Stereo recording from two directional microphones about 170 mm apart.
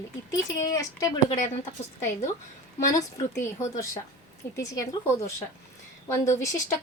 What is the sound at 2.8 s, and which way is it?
Speech, 20° left (ahead or behind).